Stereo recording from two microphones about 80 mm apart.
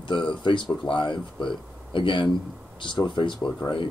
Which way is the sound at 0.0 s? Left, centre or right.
Left.